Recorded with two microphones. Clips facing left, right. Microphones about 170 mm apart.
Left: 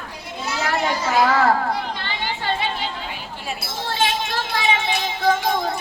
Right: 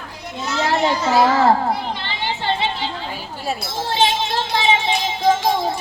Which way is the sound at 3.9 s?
25° right (ahead or behind).